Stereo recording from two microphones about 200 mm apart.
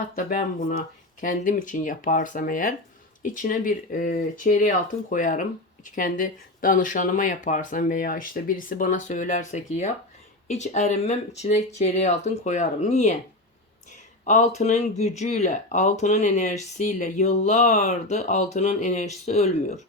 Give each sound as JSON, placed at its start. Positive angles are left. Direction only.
{"t": 0.3, "sound": "speech", "side_deg": 40}
{"t": 14.3, "sound": "speech", "side_deg": 35}